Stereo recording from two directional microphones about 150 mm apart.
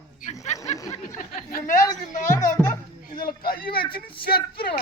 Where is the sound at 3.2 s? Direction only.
85° left.